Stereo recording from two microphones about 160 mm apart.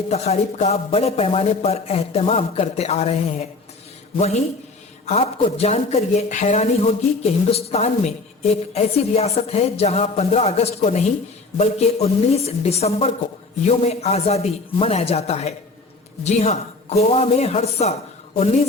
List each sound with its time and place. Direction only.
0.1 s a man's voice: 40° left (ahead or behind)